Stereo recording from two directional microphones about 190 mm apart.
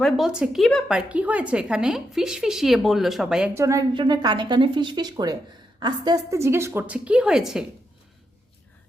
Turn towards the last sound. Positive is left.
turn(degrees=-5)  # may be behind; listen again after turning